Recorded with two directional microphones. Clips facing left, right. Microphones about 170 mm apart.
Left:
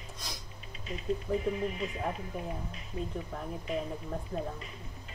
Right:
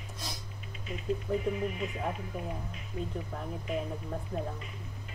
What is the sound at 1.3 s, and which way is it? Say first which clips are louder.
Speech: even; centre (ahead or behind).